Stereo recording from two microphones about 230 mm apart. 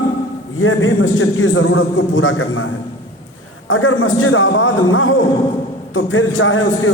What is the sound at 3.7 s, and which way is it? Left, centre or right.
A man's voice, left.